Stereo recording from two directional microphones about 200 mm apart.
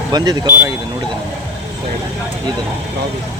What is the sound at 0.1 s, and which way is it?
Speech, 15° right (ahead or behind).